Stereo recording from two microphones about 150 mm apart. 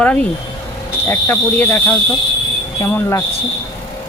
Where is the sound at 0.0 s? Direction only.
10° left (ahead or behind).